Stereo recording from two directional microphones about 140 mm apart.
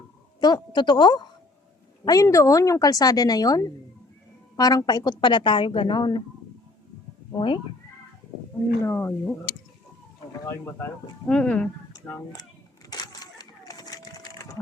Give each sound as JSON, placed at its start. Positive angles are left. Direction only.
{"t": 0.3, "sound": "a woman's voice", "side_deg": 30}
{"t": 7.3, "sound": "a woman's voice", "side_deg": 35}
{"t": 8.8, "sound": "speech", "side_deg": 15}
{"t": 11.3, "sound": "speech", "side_deg": 10}
{"t": 12.9, "sound": "a sound", "side_deg": 30}